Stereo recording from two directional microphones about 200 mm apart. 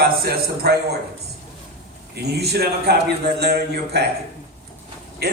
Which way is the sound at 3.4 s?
55° right (ahead or behind).